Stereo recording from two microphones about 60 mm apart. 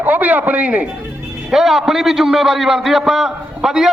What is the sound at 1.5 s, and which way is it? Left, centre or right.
A man's voice, centre.